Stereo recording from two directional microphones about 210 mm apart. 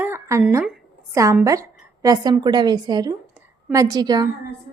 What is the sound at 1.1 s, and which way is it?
A woman's voice, 15° right (ahead or behind).